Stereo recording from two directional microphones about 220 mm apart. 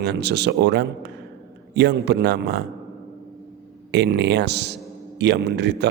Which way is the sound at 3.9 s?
50° right (ahead or behind).